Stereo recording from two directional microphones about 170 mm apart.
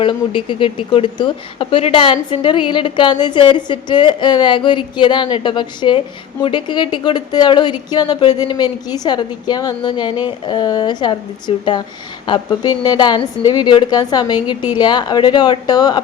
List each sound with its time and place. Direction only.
0.0 s speech: 30° left (ahead or behind)